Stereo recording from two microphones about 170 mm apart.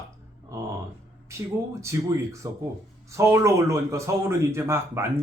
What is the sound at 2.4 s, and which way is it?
A man's voice, 20° right (ahead or behind).